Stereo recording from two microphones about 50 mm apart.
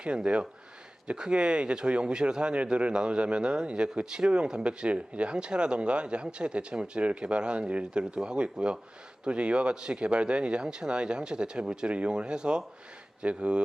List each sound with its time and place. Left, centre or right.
0.0 s speech: right